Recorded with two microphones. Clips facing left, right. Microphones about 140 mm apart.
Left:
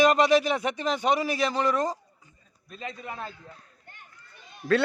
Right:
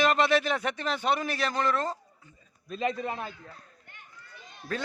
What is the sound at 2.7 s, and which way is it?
Speech, 90° right.